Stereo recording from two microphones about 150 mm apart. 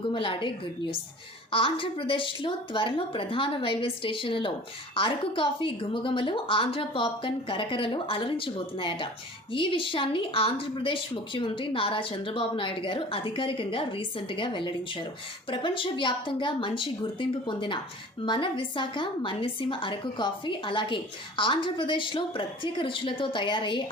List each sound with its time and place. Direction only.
0.1 s a woman's voice: 35° left (ahead or behind)